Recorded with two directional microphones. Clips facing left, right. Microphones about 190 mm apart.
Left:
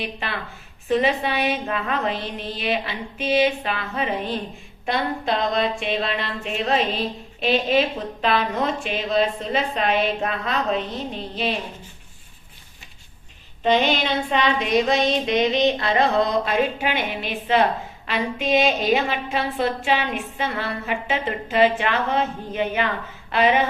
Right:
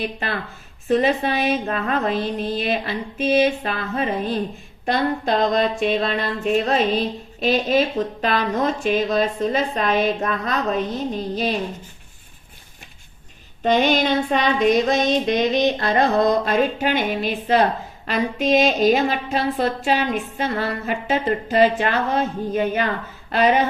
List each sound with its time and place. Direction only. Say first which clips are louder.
0.9 s child singing: right 2 dB; 40° right (ahead or behind)
13.7 s child singing: right 2 dB; 45° right (ahead or behind)
18.0 s a woman's voice: right 4 dB; 40° right (ahead or behind)